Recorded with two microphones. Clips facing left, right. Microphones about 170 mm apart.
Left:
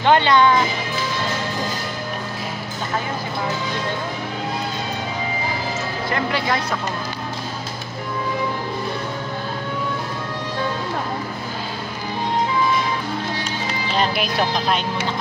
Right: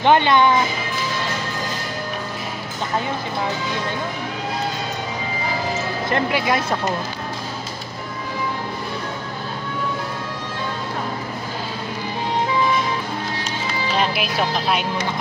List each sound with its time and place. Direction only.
0.0 s speech: 20° right (ahead or behind)
6.1 s speech: 20° right (ahead or behind)
13.9 s speech: 5° right (ahead or behind)